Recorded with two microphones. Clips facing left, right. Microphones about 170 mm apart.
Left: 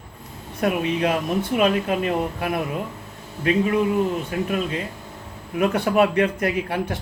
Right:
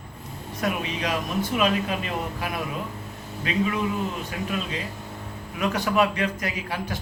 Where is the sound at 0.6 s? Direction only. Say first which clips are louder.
Left 6 dB; 55° left (ahead or behind).